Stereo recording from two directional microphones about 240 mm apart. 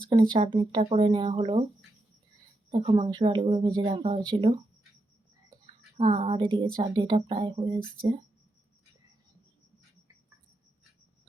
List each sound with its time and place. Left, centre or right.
0.1 s speech: right
2.6 s speech: right
6.0 s speech: right